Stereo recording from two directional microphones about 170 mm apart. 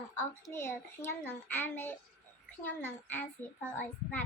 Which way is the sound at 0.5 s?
15° left (ahead or behind).